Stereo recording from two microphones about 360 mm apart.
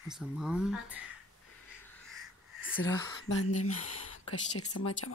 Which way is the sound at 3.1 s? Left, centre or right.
Left.